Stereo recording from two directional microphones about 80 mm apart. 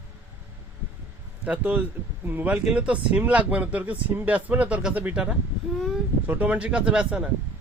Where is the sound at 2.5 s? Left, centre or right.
Centre.